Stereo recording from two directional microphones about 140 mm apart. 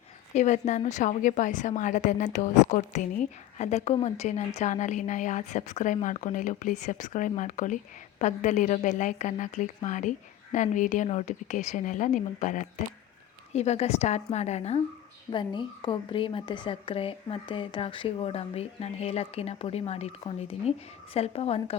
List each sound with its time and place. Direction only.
0.3 s a woman's voice: 55° left (ahead or behind)
13.5 s a woman's voice: 50° left (ahead or behind)
15.3 s a woman's voice: 35° left (ahead or behind)